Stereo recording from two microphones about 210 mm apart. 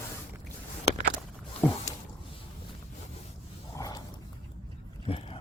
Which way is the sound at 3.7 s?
15° left (ahead or behind).